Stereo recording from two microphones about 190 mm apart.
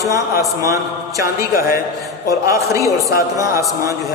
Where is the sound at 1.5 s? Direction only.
50° left (ahead or behind).